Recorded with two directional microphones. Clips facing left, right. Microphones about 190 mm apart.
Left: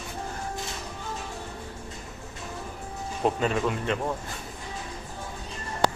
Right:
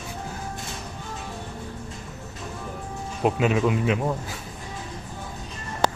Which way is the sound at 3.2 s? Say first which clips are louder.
Right 4 dB; 10° right (ahead or behind).